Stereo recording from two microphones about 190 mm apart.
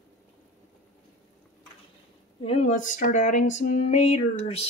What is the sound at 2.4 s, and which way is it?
Speech, 35° left (ahead or behind).